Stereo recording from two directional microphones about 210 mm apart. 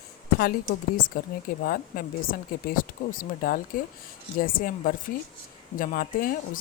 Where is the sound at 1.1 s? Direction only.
40° left (ahead or behind).